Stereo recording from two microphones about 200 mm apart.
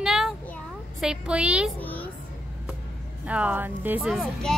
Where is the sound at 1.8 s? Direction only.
10° left (ahead or behind).